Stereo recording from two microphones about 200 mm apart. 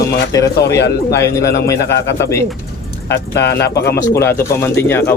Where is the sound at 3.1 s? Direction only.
55° left (ahead or behind).